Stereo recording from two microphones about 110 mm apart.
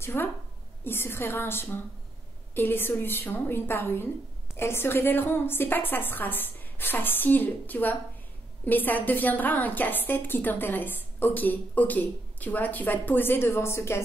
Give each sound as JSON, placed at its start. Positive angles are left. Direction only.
{"t": 0.0, "sound": "a woman's voice", "side_deg": 20}